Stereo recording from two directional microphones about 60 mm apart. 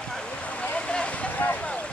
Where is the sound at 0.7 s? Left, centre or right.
Centre.